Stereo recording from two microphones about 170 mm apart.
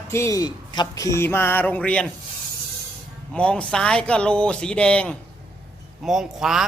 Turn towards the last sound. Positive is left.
turn(degrees=0)  # may be behind; listen again after turning